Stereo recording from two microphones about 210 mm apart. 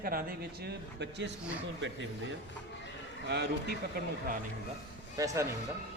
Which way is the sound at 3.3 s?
55° right (ahead or behind).